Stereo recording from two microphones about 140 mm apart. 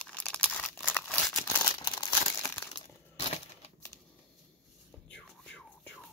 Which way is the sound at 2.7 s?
45° left (ahead or behind).